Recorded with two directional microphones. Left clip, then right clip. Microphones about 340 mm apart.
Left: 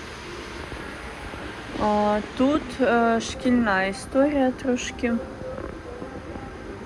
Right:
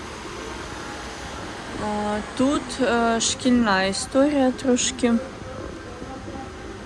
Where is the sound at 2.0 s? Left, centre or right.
Centre.